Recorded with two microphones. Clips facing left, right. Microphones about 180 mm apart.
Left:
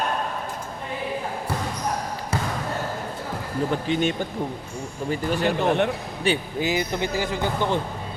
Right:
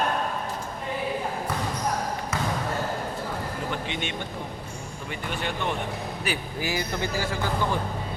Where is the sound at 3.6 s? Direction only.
40° left (ahead or behind).